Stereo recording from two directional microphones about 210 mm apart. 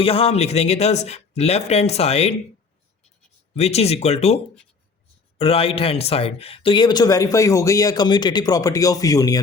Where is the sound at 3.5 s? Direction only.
30° left (ahead or behind).